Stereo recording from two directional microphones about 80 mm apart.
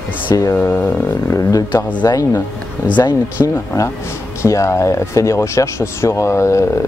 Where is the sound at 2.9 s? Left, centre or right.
Left.